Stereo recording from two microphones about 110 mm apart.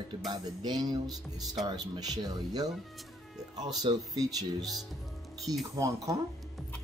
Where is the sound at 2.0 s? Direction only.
35° right (ahead or behind).